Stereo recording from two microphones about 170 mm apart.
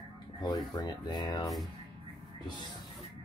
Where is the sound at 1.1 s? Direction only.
25° left (ahead or behind).